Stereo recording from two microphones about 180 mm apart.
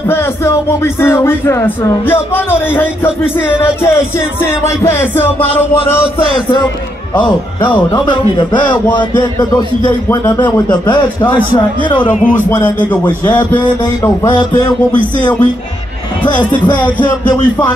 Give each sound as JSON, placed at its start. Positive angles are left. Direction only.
{"t": 0.1, "sound": "speech", "side_deg": 15}
{"t": 4.4, "sound": "speech", "side_deg": 15}
{"t": 7.9, "sound": "a man's voice", "side_deg": 25}
{"t": 12.1, "sound": "speech", "side_deg": 45}
{"t": 12.4, "sound": "speech", "side_deg": 10}
{"t": 16.7, "sound": "speech", "side_deg": 10}